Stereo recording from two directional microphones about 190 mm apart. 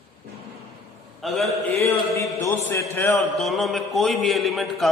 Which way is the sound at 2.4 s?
10° left (ahead or behind).